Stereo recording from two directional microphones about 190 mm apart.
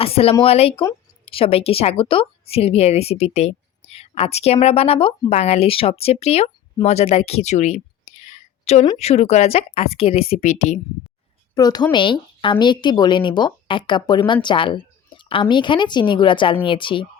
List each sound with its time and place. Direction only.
0.0 s a woman's voice: 30° left (ahead or behind)
11.5 s a woman's voice: 20° left (ahead or behind)